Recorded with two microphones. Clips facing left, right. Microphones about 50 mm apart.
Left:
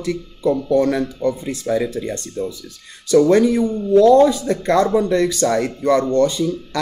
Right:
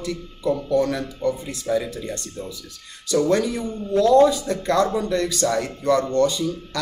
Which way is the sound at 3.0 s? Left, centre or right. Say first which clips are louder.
Left 7 dB; left.